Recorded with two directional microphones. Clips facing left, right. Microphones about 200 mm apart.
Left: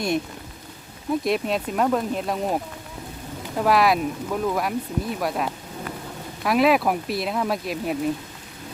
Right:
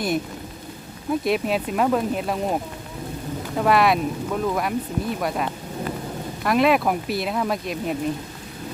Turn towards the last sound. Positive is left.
turn(degrees=0)  # may be behind; listen again after turning